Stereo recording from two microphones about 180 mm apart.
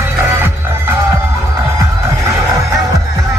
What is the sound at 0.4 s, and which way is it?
Music, 15° right (ahead or behind).